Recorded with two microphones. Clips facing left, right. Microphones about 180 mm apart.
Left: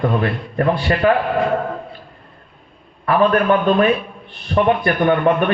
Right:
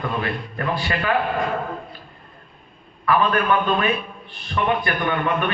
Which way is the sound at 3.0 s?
40° left (ahead or behind).